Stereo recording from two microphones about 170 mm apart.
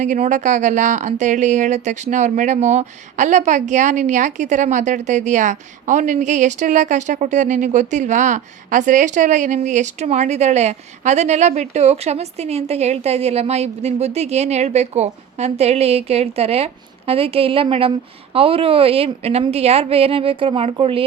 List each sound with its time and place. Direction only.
0.0 s a woman's voice: 45° right (ahead or behind)